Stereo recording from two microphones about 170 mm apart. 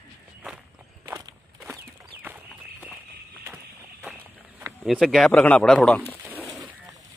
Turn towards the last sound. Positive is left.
turn(degrees=5)  # may be behind; listen again after turning